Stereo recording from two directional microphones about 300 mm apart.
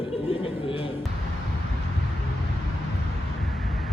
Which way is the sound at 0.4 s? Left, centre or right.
Centre.